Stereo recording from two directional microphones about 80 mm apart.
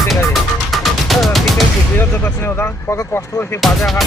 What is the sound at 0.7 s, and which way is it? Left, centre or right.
Music, centre.